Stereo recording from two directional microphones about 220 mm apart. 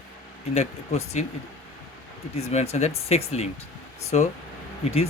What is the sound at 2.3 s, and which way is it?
Speech, 30° left (ahead or behind).